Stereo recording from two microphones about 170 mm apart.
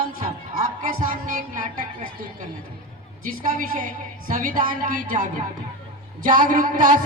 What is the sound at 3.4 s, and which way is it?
Speech, 55° right (ahead or behind).